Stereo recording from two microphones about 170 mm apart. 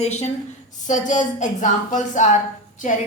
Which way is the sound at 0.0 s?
40° left (ahead or behind).